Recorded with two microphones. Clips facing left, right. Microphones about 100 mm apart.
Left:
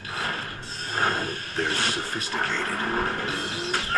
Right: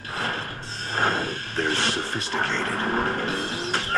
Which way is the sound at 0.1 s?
35° right (ahead or behind).